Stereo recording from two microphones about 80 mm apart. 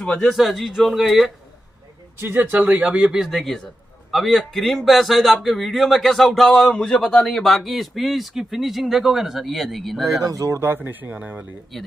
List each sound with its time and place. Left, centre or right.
0.0 s a man's voice: centre
2.1 s speech: right
3.2 s a man's voice: centre
10.2 s speech: right
10.6 s speech: right
11.7 s a man's voice: centre